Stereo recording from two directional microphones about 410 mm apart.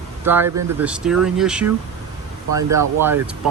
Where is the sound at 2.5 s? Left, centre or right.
Right.